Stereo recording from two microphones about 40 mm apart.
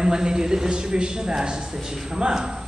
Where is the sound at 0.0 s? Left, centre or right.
Centre.